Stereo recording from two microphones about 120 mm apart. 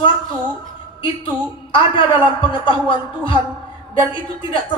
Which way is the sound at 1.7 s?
45° left (ahead or behind).